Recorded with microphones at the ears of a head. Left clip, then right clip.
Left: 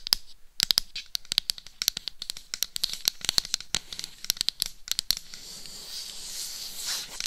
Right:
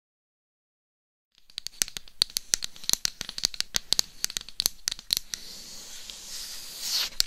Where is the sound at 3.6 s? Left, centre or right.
Right.